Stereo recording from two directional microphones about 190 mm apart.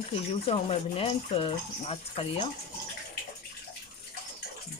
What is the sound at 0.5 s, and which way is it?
Speech, 30° left (ahead or behind).